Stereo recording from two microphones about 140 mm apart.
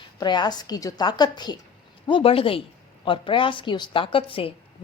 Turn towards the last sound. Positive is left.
turn(degrees=40)  # may be behind; listen again after turning